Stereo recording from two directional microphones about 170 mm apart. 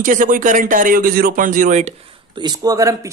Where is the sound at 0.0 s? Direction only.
50° right (ahead or behind).